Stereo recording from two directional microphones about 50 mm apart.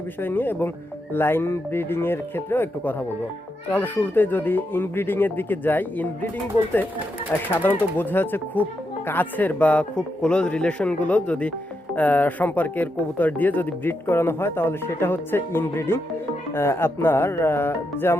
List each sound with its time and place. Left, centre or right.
0.2 s speech: left
7.5 s speech: left
9.9 s speech: centre; by 18.2 s left